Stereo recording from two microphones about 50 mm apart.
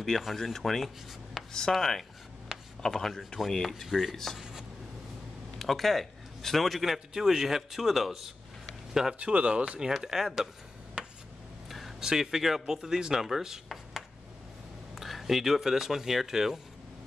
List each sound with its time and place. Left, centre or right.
0.0 s a man's voice: centre
4.4 s a sound: centre
5.6 s a man's voice: centre
9.2 s speech: right; by 10.5 s centre
11.0 s a sound: right
12.0 s speech: centre